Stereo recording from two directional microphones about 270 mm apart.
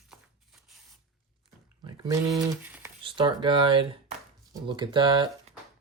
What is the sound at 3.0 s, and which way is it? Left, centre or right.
Speech, centre.